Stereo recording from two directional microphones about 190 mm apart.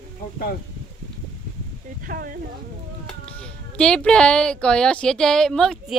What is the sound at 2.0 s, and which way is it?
Speech, 50° right (ahead or behind).